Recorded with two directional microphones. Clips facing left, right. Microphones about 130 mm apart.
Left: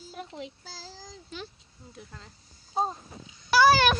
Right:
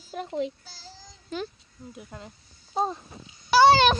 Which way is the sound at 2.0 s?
15° right (ahead or behind).